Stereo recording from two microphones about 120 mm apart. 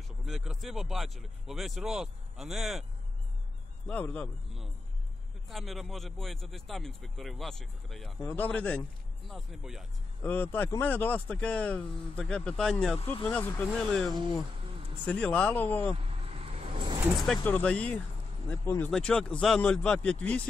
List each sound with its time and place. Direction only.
0.2 s speech: centre (ahead or behind)
3.8 s speech: 10° left (ahead or behind)
5.5 s speech: centre (ahead or behind)
8.3 s speech: 15° left (ahead or behind)
9.3 s speech: 5° right (ahead or behind)
10.2 s speech: 15° left (ahead or behind)
13.7 s speech: 5° left (ahead or behind)
15.9 s vehicle: 55° right (ahead or behind)
17.4 s speech: 15° left (ahead or behind)
18.9 s speech: 5° left (ahead or behind)